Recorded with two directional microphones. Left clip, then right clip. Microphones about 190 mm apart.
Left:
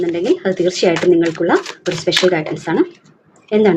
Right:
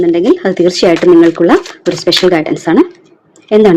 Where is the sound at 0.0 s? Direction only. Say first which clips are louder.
Right 7 dB; 50° right (ahead or behind).